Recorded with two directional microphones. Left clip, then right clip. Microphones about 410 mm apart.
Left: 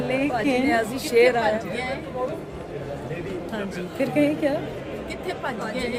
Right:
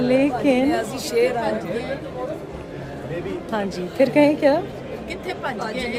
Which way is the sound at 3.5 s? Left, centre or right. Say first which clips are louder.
Right 5 dB; centre.